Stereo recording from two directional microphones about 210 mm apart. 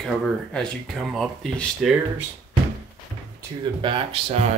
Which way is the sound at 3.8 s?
25° right (ahead or behind).